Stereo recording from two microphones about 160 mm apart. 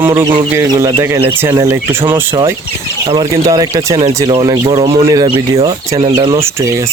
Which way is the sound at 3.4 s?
25° right (ahead or behind).